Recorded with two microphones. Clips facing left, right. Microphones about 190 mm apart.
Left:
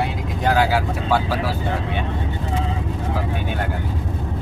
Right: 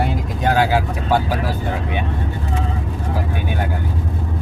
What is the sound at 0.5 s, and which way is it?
Vehicle, 20° right (ahead or behind).